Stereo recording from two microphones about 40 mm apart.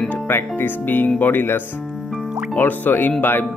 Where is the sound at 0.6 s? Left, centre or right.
Left.